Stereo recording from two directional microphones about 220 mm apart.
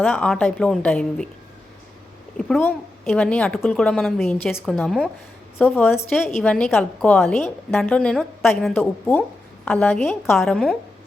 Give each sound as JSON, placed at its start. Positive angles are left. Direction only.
{"t": 0.0, "sound": "a woman's voice", "side_deg": 5}
{"t": 2.4, "sound": "a woman's voice", "side_deg": 5}
{"t": 5.5, "sound": "a woman's voice", "side_deg": 10}
{"t": 6.1, "sound": "a woman's voice", "side_deg": 0}
{"t": 8.7, "sound": "a woman's voice", "side_deg": 10}